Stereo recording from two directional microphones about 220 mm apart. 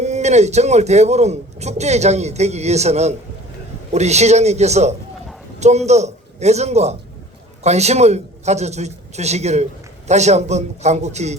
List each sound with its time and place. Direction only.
0.0 s a man's voice: 30° right (ahead or behind)